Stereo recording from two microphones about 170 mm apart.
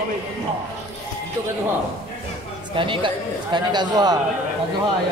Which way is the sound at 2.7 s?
30° right (ahead or behind).